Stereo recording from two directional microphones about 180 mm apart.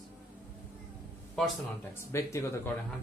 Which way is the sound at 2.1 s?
15° left (ahead or behind).